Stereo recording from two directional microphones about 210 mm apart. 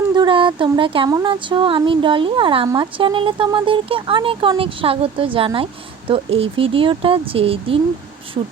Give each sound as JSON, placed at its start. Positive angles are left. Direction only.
{"t": 0.1, "sound": "speech", "side_deg": -20}